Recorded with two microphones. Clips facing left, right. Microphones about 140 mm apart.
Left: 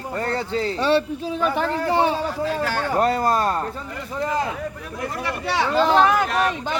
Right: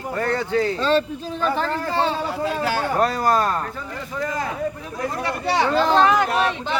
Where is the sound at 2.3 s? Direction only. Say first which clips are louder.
Right 1 dB; 15° right (ahead or behind).